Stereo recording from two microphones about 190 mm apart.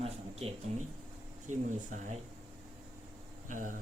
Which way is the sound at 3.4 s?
45° right (ahead or behind).